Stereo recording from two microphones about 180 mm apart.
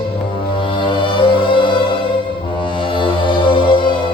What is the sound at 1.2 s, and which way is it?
Music, 30° left (ahead or behind).